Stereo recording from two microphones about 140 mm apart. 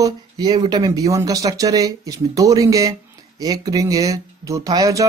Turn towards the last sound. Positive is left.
turn(degrees=-25)  # may be behind; listen again after turning